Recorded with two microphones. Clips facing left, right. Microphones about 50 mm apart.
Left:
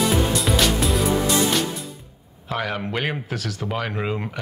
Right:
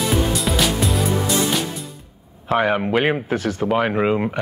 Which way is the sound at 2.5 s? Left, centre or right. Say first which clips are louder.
Right 8 dB; right.